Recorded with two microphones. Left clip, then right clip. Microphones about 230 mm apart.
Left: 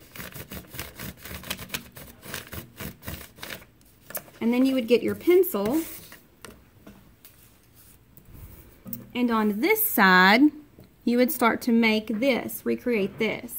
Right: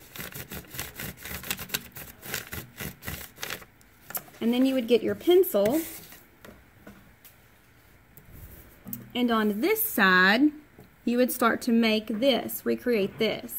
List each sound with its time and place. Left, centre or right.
0.2 s a sound: centre
4.4 s a woman's voice: centre
9.1 s a woman's voice: centre